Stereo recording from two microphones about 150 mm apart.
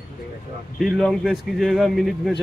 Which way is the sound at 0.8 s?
Centre (ahead or behind).